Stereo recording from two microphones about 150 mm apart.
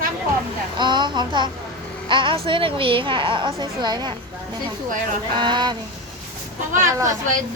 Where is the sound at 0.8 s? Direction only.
30° right (ahead or behind).